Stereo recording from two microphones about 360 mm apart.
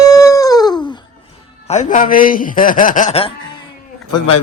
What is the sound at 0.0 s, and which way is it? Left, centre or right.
Dog, centre.